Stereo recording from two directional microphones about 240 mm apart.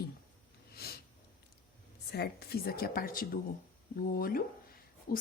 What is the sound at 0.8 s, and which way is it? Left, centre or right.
Sniff, left.